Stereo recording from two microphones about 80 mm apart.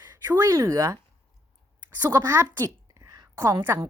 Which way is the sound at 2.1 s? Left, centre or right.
Right.